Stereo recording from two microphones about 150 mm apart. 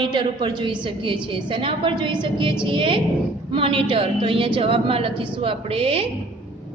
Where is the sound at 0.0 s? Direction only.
35° right (ahead or behind).